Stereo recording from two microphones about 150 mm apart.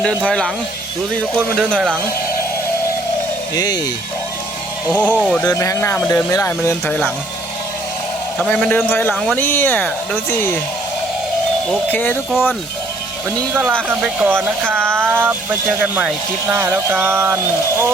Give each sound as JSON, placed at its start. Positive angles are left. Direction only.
{"t": 0.3, "sound": "speech", "side_deg": 5}
{"t": 1.5, "sound": "speech", "side_deg": 5}
{"t": 3.5, "sound": "speech", "side_deg": 25}
{"t": 4.9, "sound": "speech", "side_deg": 10}
{"t": 5.5, "sound": "speech", "side_deg": 20}
{"t": 8.4, "sound": "speech", "side_deg": 5}
{"t": 9.4, "sound": "speech", "side_deg": 10}
{"t": 11.9, "sound": "speech", "side_deg": 10}
{"t": 13.5, "sound": "speech", "side_deg": -10}